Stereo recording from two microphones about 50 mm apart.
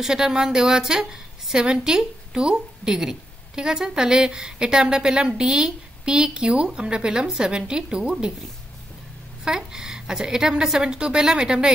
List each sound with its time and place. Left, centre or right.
0.0 s speech: centre
9.4 s speech: centre